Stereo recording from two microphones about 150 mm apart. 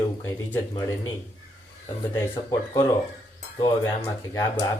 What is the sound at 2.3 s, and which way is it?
Speech, 30° left (ahead or behind).